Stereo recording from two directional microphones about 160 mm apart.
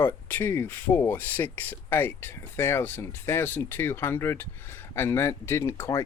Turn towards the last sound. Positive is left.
turn(degrees=15)  # may be behind; listen again after turning